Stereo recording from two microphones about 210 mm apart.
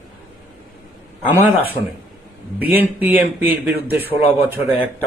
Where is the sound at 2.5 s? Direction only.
10° right (ahead or behind).